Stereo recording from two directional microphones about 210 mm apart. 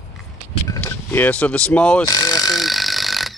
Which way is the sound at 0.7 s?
10° left (ahead or behind).